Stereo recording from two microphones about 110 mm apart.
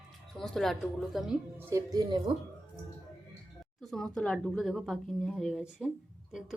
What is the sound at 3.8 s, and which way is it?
A woman's voice, centre (ahead or behind).